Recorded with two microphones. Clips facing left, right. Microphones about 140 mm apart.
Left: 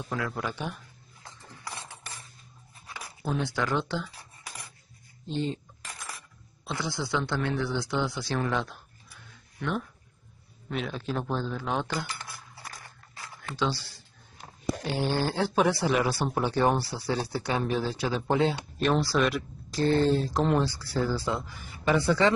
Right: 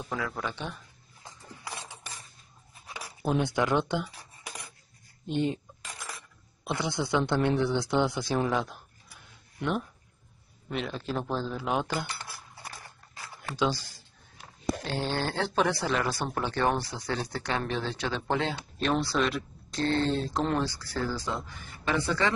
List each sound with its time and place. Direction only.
0.1 s speech: centre (ahead or behind)
3.3 s speech: 15° right (ahead or behind)
5.2 s speech: 15° right (ahead or behind)
6.7 s speech: 20° right (ahead or behind)
8.4 s speech: 5° right (ahead or behind)
10.7 s speech: centre (ahead or behind)
13.6 s speech: 15° right (ahead or behind)
14.9 s speech: 10° left (ahead or behind)